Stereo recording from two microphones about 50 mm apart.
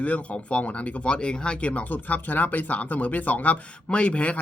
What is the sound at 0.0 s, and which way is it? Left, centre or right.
Speech, left.